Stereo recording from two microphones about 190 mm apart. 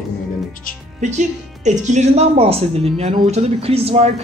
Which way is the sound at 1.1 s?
40° right (ahead or behind).